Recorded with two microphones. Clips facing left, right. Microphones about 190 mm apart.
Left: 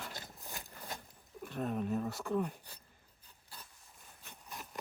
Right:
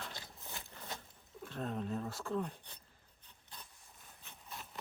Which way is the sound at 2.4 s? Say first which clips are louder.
Left 3 dB; 5° left (ahead or behind).